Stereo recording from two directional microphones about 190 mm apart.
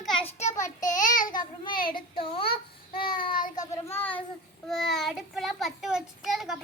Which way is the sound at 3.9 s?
10° left (ahead or behind).